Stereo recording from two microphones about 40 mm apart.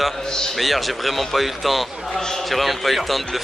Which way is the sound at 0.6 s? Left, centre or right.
Centre.